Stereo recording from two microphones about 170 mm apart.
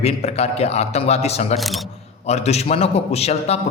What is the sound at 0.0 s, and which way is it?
A man's voice, 35° left (ahead or behind).